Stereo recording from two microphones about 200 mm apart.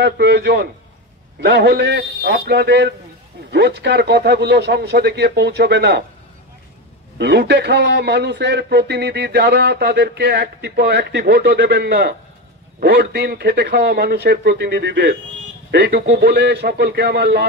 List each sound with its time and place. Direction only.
0.0 s a man's voice: 55° right (ahead or behind)
7.2 s a man's voice: 60° right (ahead or behind)